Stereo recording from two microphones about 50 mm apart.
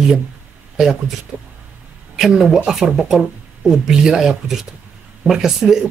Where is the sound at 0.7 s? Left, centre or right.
Centre.